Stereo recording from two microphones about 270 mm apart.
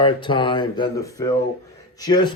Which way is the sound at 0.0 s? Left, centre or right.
Centre.